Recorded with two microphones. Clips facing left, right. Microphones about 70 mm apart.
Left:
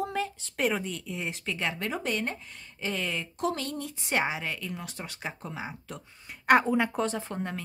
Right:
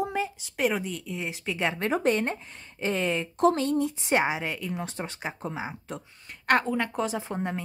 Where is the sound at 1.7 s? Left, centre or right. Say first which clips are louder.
Right 7 dB; right.